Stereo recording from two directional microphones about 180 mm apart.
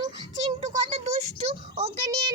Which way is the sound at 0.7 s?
40° right (ahead or behind).